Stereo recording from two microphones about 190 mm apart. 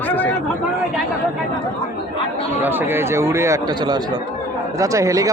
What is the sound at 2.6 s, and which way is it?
Speech, 10° right (ahead or behind).